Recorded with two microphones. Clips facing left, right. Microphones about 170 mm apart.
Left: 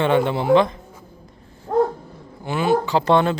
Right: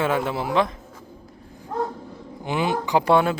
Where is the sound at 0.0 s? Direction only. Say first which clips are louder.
Left 5 dB; 5° right (ahead or behind).